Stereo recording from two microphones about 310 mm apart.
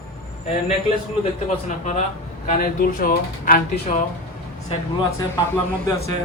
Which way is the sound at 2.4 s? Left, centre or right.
Left.